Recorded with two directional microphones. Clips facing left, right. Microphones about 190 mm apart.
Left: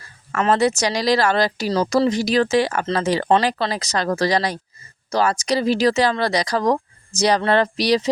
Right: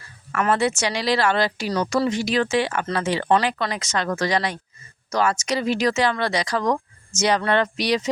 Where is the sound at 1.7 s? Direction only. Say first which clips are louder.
Left 4 dB; 30° left (ahead or behind).